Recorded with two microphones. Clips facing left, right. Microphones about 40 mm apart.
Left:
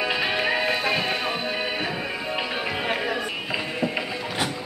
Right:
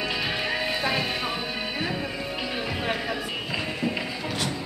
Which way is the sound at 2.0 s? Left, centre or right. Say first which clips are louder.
Left 3 dB; left.